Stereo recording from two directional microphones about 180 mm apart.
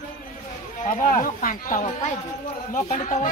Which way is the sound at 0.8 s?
40° left (ahead or behind).